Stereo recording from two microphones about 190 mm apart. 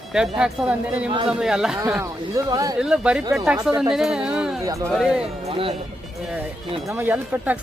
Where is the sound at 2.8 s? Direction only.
5° right (ahead or behind).